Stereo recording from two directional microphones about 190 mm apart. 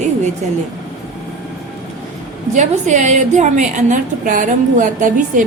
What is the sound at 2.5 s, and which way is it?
A woman's voice, 40° right (ahead or behind).